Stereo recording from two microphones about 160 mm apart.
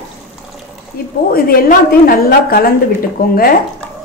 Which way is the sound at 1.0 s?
70° left (ahead or behind).